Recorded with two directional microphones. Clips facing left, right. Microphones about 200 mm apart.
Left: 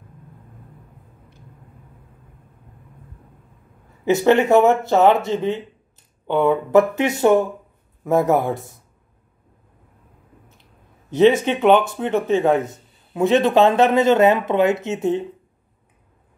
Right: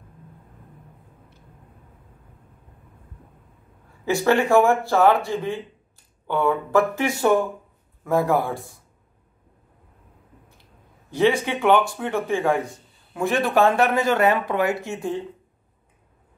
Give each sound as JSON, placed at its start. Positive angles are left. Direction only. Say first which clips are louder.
{"t": 4.0, "sound": "speech", "louder": "left 4 dB", "side_deg": 20}
{"t": 10.6, "sound": "speech", "louder": "left 1 dB", "side_deg": 20}